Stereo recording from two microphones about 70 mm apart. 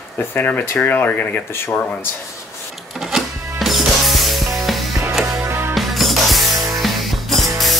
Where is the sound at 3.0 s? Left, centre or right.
Centre.